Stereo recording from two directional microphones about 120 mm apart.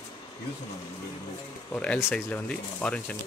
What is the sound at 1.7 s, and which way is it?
Speech, 10° left (ahead or behind).